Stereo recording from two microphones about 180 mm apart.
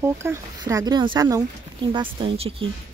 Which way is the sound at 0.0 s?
15° right (ahead or behind).